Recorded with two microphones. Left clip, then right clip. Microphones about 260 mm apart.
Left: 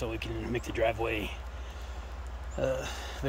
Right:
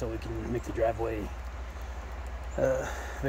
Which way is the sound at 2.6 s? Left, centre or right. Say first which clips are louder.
Right 3 dB; centre.